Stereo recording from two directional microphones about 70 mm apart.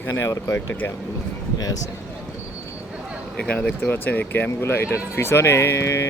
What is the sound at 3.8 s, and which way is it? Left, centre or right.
Speech, left.